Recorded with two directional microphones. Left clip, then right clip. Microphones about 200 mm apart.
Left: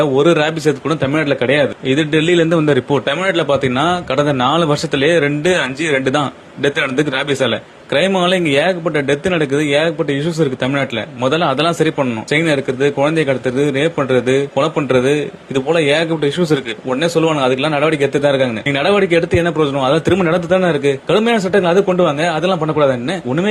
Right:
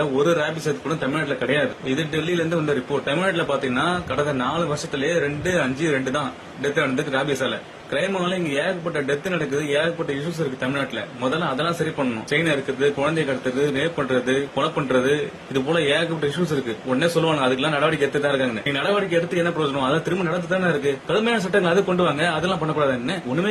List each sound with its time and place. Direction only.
0.3 s a man's voice: 40° left (ahead or behind)
6.6 s a man's voice: 40° left (ahead or behind)
8.2 s a man's voice: 45° left (ahead or behind)
12.3 s a man's voice: 40° left (ahead or behind)